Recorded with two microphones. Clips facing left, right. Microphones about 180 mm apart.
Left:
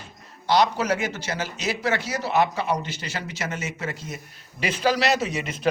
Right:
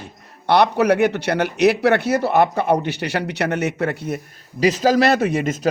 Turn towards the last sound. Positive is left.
turn(degrees=-45)  # may be behind; listen again after turning